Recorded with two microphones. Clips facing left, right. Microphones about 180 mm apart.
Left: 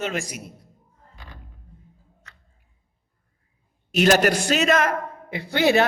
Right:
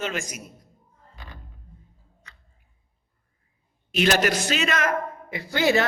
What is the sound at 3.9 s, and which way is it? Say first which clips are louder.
A man's voice: left 4 dB; 40° left (ahead or behind).